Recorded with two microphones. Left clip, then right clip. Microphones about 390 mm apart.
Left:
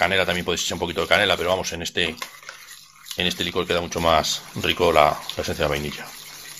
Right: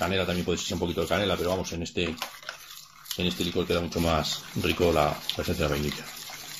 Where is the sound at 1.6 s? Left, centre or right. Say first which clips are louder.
Left 6 dB; centre.